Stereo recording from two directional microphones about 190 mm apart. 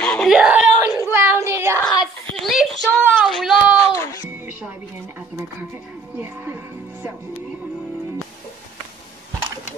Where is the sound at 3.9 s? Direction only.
15° left (ahead or behind).